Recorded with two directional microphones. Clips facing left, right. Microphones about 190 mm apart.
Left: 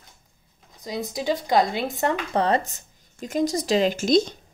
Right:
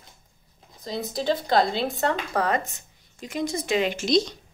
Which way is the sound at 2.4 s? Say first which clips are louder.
Left 3 dB; 35° left (ahead or behind).